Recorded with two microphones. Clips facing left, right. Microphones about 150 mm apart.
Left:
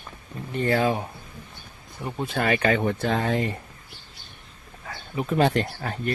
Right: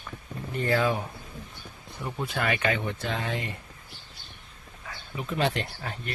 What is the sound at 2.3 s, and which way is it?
Speech, 35° left (ahead or behind).